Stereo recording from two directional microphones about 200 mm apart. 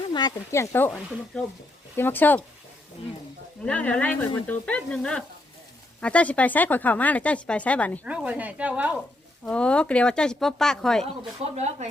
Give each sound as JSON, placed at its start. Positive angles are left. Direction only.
{"t": 0.1, "sound": "speech", "side_deg": 20}
{"t": 2.0, "sound": "speech", "side_deg": 10}
{"t": 3.7, "sound": "speech", "side_deg": 5}
{"t": 8.0, "sound": "speech", "side_deg": -5}
{"t": 9.5, "sound": "speech", "side_deg": 5}
{"t": 11.5, "sound": "speech", "side_deg": -35}